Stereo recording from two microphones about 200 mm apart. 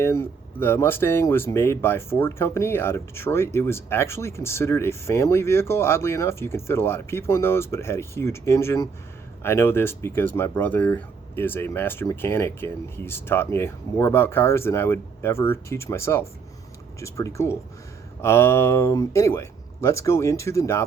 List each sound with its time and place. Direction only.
0.0 s speech: 10° left (ahead or behind)